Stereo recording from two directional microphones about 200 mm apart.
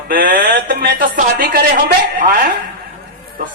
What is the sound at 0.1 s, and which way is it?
A man's voice, 45° right (ahead or behind).